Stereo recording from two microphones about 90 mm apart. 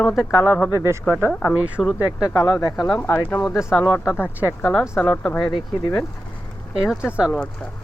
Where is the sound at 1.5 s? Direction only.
15° right (ahead or behind).